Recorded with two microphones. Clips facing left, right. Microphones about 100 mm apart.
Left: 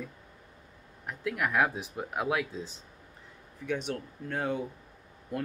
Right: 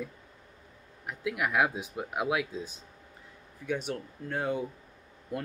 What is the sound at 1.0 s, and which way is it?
Speech, 10° right (ahead or behind).